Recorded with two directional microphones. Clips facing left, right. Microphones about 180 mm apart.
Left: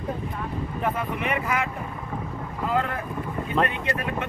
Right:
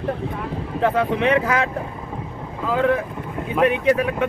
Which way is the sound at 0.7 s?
90° right.